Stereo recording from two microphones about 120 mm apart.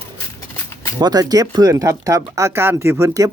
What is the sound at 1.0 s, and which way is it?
Speech, 35° right (ahead or behind).